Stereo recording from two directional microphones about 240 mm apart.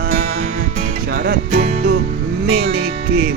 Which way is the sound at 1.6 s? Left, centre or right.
Right.